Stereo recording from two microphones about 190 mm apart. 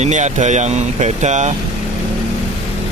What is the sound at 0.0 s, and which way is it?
Speech, 35° right (ahead or behind).